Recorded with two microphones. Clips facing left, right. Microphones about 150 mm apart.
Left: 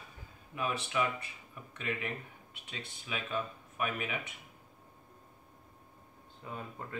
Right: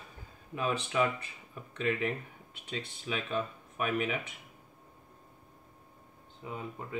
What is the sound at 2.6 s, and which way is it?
Speech, 35° right (ahead or behind).